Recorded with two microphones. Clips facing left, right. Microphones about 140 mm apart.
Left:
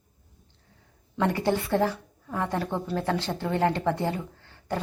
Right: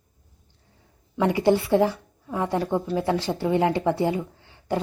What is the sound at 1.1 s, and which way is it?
A woman's voice, 10° right (ahead or behind).